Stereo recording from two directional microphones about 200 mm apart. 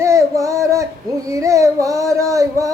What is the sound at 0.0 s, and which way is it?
Female singing, 15° right (ahead or behind).